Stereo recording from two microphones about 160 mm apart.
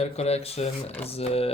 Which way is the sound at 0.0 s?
40° left (ahead or behind).